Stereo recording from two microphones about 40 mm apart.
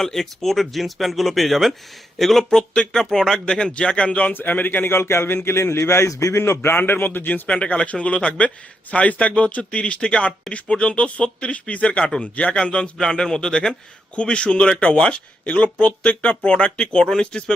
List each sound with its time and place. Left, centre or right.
0.0 s speech: centre
2.5 s speech: centre
3.4 s speech: left
4.3 s a man's voice: left
4.9 s a man's voice: left
7.4 s speech: left